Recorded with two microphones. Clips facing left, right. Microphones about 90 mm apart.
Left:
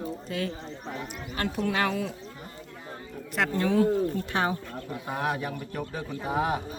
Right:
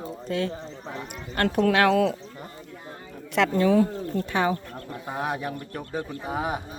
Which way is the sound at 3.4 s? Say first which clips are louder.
Right 6 dB; 90° right.